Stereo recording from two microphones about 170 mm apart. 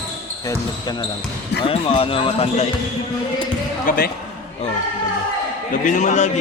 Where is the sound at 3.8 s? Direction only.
60° left (ahead or behind).